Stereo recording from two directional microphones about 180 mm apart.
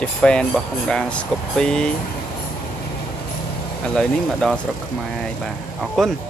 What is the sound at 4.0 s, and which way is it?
Speech, 5° left (ahead or behind).